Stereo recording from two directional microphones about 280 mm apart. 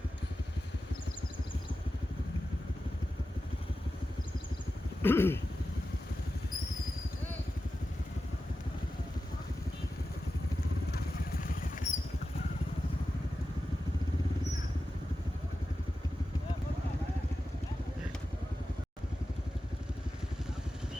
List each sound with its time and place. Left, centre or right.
5.0 s speech: centre
10.9 s rodents: left